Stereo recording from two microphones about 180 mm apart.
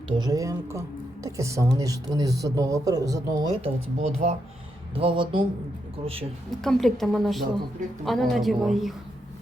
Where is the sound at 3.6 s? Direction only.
40° right (ahead or behind).